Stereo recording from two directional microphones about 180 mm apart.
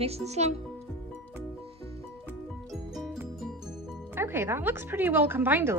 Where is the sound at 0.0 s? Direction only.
35° right (ahead or behind).